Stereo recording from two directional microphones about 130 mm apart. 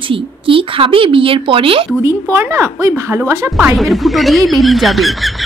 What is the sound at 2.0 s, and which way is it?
A woman's voice, 20° right (ahead or behind).